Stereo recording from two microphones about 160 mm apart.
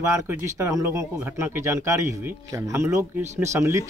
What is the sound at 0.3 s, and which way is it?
Speech, 15° right (ahead or behind).